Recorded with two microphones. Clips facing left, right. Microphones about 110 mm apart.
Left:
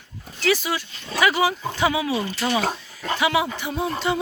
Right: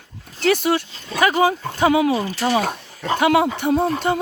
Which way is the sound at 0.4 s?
55° right (ahead or behind).